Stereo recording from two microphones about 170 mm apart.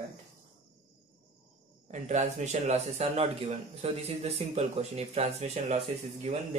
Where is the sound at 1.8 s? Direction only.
45° right (ahead or behind).